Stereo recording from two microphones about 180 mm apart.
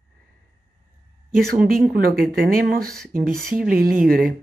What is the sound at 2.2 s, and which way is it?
Speech, 50° right (ahead or behind).